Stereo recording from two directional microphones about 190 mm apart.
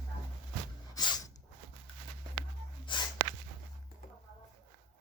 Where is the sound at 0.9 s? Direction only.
20° left (ahead or behind).